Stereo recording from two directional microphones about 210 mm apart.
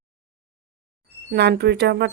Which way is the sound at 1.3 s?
50° right (ahead or behind).